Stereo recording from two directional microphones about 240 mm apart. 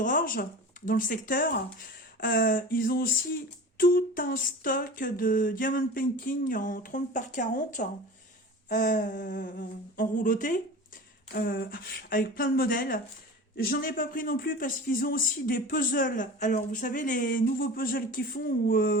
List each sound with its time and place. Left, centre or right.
0.0 s a man's voice: left